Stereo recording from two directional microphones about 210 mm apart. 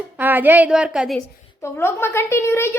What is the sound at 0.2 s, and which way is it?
A woman's voice, 10° right (ahead or behind).